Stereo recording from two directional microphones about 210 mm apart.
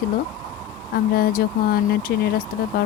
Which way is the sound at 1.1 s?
45° left (ahead or behind).